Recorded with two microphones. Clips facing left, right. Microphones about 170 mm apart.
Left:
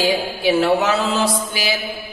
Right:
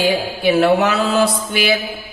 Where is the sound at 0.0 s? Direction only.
60° right (ahead or behind).